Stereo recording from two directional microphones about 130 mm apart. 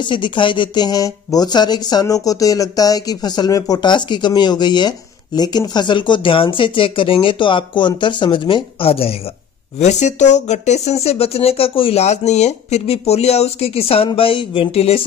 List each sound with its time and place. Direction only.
0.0 s speech: 40° left (ahead or behind)
9.8 s speech: 65° left (ahead or behind)